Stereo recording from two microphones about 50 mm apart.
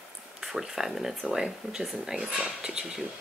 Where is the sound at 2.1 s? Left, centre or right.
Right.